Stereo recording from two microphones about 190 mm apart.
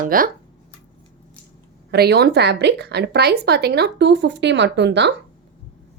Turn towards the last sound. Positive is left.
turn(degrees=-65)  # may be behind; listen again after turning